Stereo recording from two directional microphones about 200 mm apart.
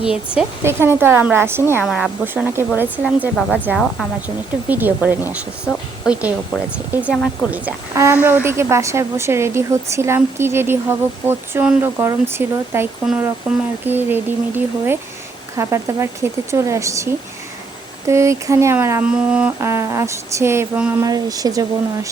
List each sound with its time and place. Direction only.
0.0 s a woman's voice: 5° right (ahead or behind)
6.9 s a woman's voice: 5° right (ahead or behind)